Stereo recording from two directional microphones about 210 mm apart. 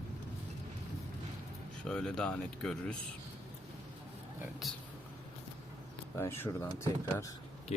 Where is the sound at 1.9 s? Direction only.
5° left (ahead or behind).